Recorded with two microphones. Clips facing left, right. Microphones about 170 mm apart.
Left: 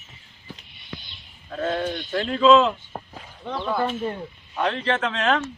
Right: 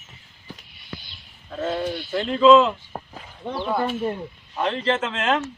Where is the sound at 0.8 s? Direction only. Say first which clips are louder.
Even; 5° right (ahead or behind).